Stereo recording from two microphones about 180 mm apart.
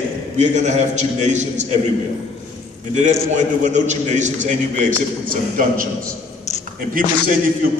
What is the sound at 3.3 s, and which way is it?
A man's voice, 40° right (ahead or behind).